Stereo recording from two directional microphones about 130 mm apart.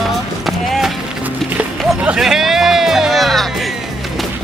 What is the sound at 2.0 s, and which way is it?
Music, 5° right (ahead or behind).